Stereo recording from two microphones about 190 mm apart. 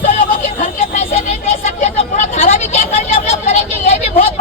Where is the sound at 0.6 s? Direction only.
40° left (ahead or behind).